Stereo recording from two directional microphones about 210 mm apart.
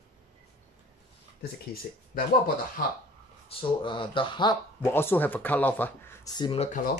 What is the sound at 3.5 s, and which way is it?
Speech, 25° left (ahead or behind).